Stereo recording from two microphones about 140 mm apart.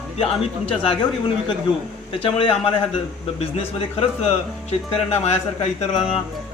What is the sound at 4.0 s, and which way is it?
Speech, 45° left (ahead or behind).